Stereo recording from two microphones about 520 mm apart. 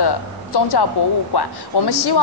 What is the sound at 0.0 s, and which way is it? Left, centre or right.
Speech, left.